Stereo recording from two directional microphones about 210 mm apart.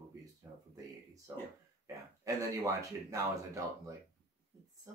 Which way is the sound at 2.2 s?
15° right (ahead or behind).